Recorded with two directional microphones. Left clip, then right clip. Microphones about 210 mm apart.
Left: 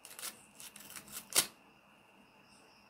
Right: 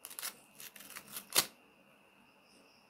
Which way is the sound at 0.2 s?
10° right (ahead or behind).